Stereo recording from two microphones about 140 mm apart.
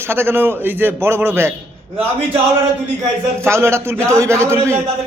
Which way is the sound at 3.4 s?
20° right (ahead or behind).